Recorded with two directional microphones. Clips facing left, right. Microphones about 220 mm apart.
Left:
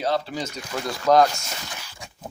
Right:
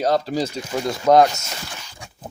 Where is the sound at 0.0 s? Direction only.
40° right (ahead or behind); by 1.5 s 25° right (ahead or behind).